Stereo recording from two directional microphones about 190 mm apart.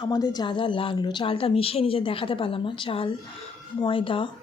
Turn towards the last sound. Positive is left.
turn(degrees=25)  # may be behind; listen again after turning